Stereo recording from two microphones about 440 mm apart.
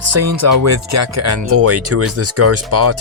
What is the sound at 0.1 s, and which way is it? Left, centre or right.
Speech, right.